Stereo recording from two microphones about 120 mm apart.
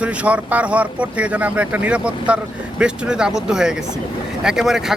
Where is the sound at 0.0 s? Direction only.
10° right (ahead or behind).